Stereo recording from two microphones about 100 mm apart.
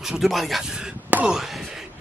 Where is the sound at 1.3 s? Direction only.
Centre (ahead or behind).